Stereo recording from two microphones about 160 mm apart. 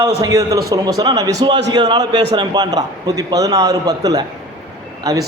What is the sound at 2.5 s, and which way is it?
A man's voice, 25° right (ahead or behind).